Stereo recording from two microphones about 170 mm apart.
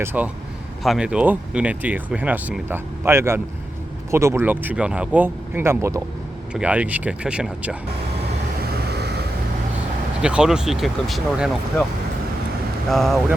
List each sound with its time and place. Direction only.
0.0 s speech: 10° right (ahead or behind)
8.9 s vehicle: 75° right (ahead or behind)
10.2 s speech: 5° right (ahead or behind)
12.9 s speech: centre (ahead or behind)